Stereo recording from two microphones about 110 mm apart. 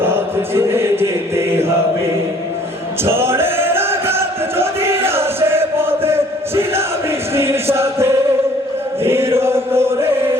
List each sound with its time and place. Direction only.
0.0 s chant: 20° right (ahead or behind)
3.0 s music: 20° right (ahead or behind)
9.0 s chant: 25° right (ahead or behind)